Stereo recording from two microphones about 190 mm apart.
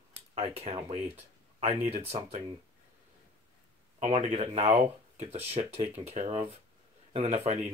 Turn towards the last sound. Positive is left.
turn(degrees=-35)  # may be behind; listen again after turning